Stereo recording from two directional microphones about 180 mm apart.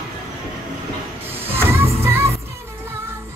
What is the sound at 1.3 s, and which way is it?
Music, 10° right (ahead or behind).